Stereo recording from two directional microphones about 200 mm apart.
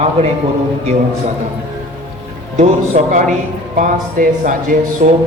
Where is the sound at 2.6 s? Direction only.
35° right (ahead or behind).